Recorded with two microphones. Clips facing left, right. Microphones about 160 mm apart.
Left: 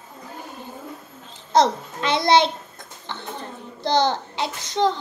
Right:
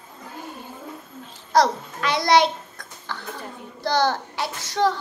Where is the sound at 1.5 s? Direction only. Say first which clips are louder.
Left 1 dB; 25° left (ahead or behind).